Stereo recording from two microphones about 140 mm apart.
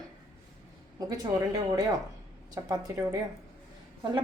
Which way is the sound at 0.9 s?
25° right (ahead or behind).